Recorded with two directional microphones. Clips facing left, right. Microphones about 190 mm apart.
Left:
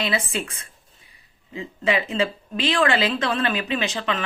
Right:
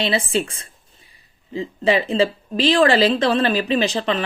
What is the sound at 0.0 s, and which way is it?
A woman's voice, 30° right (ahead or behind).